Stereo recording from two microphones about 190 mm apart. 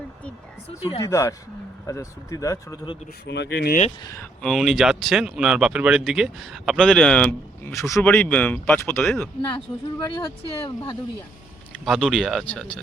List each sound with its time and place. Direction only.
0.8 s speech: 30° left (ahead or behind)
1.0 s speech: 15° left (ahead or behind)
3.2 s speech: 65° left (ahead or behind)
4.0 s speech: 15° left (ahead or behind)
4.4 s speech: centre (ahead or behind)
10.0 s speech: 20° left (ahead or behind)
11.9 s speech: centre (ahead or behind)